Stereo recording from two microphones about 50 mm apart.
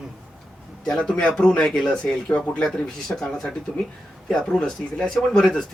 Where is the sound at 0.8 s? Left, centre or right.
Centre.